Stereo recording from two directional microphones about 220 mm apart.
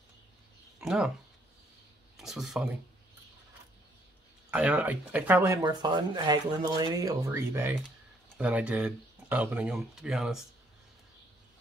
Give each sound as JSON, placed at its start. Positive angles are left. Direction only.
{"t": 0.7, "sound": "a sound", "side_deg": -5}
{"t": 2.1, "sound": "speech", "side_deg": 0}
{"t": 4.5, "sound": "speech", "side_deg": -5}